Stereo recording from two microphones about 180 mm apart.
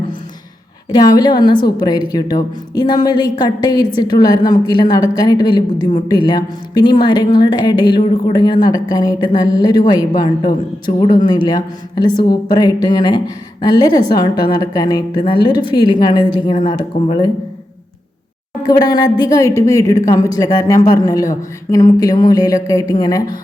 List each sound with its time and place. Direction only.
0.9 s a woman's voice: 20° left (ahead or behind)
18.6 s a woman's voice: 20° left (ahead or behind)